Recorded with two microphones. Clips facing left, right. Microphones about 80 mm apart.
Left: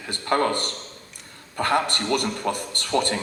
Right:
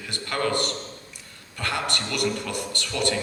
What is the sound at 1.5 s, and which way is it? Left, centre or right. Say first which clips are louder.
A man's voice: left 6 dB; left.